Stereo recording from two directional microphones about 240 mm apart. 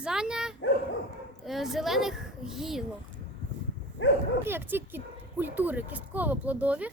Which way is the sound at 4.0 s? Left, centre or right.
Left.